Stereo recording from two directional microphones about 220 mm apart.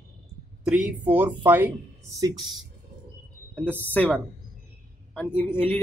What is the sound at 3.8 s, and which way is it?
Speech, 5° left (ahead or behind).